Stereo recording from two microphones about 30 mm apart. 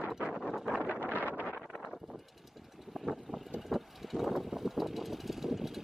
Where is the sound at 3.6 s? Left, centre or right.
Centre.